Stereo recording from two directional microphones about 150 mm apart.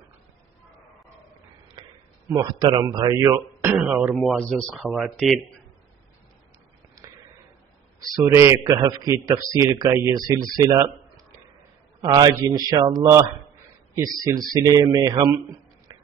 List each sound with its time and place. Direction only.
2.2 s a man's voice: 25° right (ahead or behind)
3.7 s speech: 5° right (ahead or behind)
8.3 s a man's voice: 20° right (ahead or behind)
12.0 s a man's voice: 25° right (ahead or behind)
15.9 s a sound: 25° right (ahead or behind)